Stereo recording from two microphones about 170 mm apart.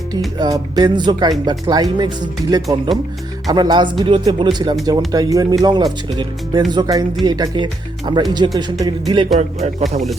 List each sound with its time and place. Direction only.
0.3 s speech: 20° right (ahead or behind)
9.4 s speech: 40° right (ahead or behind)